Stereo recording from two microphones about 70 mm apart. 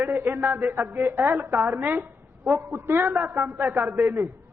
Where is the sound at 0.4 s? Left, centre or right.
Right.